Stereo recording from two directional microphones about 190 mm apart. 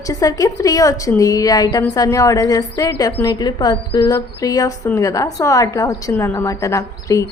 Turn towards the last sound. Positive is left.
turn(degrees=15)  # may be behind; listen again after turning